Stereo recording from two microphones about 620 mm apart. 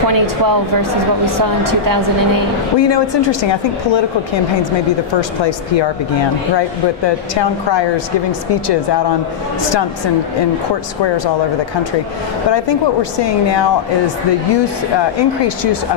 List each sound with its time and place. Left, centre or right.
1.7 s a woman's voice: right
2.8 s speech: left
7.1 s speech: left
12.4 s speech: left
15.0 s speech: left